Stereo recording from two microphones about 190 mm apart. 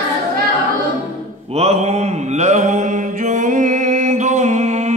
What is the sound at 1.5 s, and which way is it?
Mantra, 35° right (ahead or behind).